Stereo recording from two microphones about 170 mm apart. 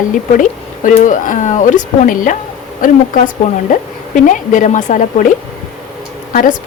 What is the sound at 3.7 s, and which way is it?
Speech, 50° left (ahead or behind).